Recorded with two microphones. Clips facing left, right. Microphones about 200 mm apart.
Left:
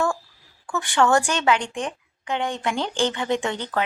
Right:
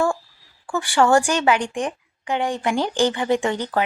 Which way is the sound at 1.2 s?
10° right (ahead or behind).